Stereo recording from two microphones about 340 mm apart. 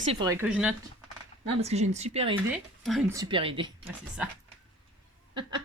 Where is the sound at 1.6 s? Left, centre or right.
Centre.